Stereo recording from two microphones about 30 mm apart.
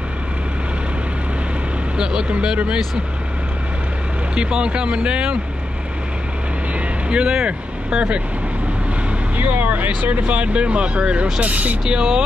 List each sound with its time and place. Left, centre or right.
4.4 s speech: right
7.1 s speech: right
9.4 s speech: right
10.2 s speech: right
10.5 s speech: right
11.4 s speech: right
11.9 s speech: right